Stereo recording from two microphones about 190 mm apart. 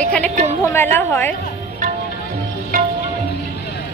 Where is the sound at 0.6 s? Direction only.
15° left (ahead or behind).